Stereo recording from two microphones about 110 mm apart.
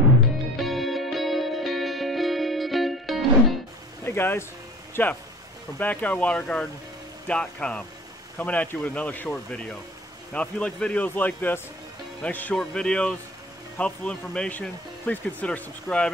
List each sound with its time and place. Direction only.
0.6 s music: centre (ahead or behind)
4.0 s speech: 20° left (ahead or behind)